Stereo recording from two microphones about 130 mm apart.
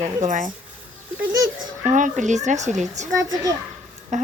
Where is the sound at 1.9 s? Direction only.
75° right (ahead or behind).